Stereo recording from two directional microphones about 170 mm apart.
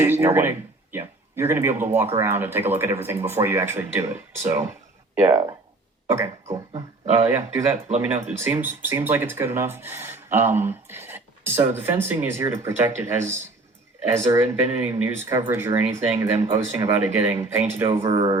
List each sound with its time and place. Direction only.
0.0 s speech: 15° right (ahead or behind)
6.1 s speech: 15° right (ahead or behind)
6.5 s dog: 25° right (ahead or behind)
7.3 s speech: 15° right (ahead or behind)
14.3 s speech: 10° right (ahead or behind)
18.1 s speech: 25° right (ahead or behind)